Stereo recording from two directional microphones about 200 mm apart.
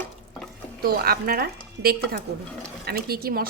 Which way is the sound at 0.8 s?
50° right (ahead or behind).